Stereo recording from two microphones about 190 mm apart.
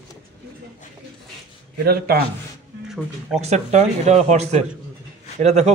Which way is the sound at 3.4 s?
35° right (ahead or behind).